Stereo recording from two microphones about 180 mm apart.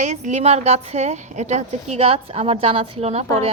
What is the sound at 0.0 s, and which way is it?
A woman's voice, 40° right (ahead or behind).